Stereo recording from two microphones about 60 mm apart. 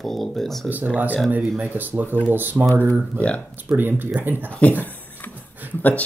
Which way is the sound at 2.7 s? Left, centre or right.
Left.